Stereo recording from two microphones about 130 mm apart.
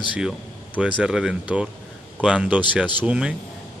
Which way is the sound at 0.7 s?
10° right (ahead or behind).